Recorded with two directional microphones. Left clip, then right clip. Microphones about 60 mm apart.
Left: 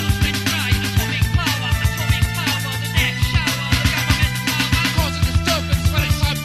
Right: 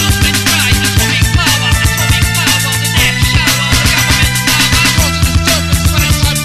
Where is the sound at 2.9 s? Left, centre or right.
Right.